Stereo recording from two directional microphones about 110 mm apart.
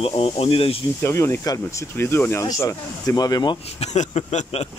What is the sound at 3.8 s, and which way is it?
Speech, 90° left.